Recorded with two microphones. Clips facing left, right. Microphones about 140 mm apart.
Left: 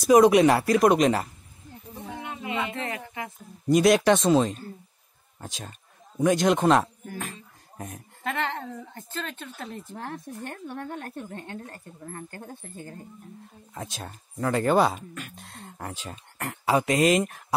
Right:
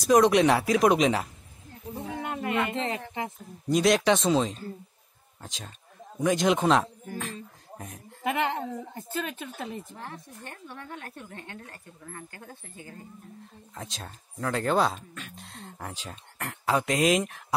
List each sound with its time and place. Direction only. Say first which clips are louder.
0.0 s speech: left 3 dB; 5° left (ahead or behind)
2.2 s music: right 5 dB; 55° right (ahead or behind)
2.7 s speech: right 2 dB; 25° right (ahead or behind)
3.6 s a man's voice: left 3 dB; 5° left (ahead or behind)
7.7 s a sound: left 4 dB; centre (ahead or behind)
8.2 s speech: right 2 dB; 15° right (ahead or behind)
9.9 s speech: left 6 dB; 55° left (ahead or behind)
13.7 s speech: left 3 dB; 5° left (ahead or behind)